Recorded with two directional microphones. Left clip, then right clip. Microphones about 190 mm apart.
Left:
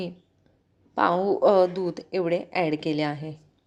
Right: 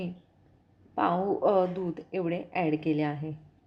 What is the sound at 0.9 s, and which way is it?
A woman's voice, 30° left (ahead or behind).